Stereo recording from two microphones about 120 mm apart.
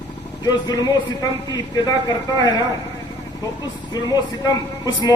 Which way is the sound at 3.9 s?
35° left (ahead or behind).